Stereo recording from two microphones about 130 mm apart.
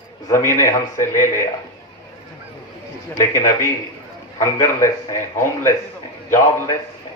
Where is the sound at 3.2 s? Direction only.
25° left (ahead or behind).